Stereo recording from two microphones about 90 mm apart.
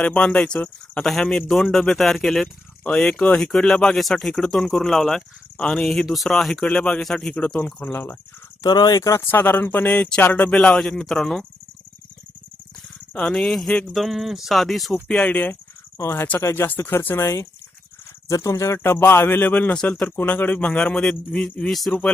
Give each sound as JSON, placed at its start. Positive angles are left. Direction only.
{"t": 0.0, "sound": "speech", "side_deg": 15}
{"t": 8.6, "sound": "speech", "side_deg": 50}
{"t": 9.2, "sound": "speech", "side_deg": 25}
{"t": 13.1, "sound": "speech", "side_deg": 10}
{"t": 15.0, "sound": "speech", "side_deg": 15}
{"t": 16.0, "sound": "speech", "side_deg": 35}